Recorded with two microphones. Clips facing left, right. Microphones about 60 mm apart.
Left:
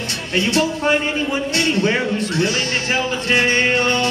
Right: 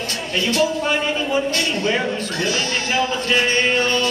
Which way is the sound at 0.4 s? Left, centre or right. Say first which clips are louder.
Left 1 dB; left.